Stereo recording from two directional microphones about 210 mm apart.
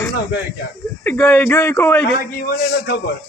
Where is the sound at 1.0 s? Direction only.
10° left (ahead or behind).